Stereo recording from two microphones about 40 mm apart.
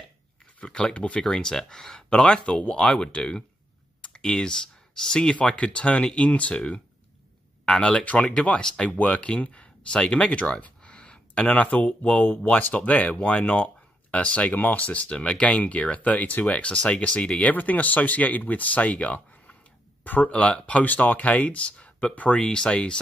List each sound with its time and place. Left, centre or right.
0.7 s speech: left
1.2 s speech: centre
2.0 s speech: left
8.0 s speech: left
8.5 s speech: left
8.8 s speech: left
11.4 s speech: left
14.5 s speech: left
14.8 s speech: left
17.5 s speech: left
20.0 s speech: left
20.2 s speech: left
20.8 s speech: left
22.4 s speech: left